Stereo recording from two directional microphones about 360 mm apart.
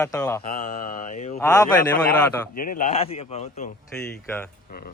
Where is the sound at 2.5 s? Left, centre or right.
Left.